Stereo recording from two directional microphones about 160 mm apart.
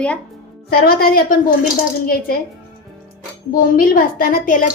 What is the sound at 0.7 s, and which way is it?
Speech, 75° left (ahead or behind).